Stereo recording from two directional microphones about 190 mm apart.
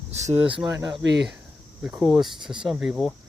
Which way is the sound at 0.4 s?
5° right (ahead or behind).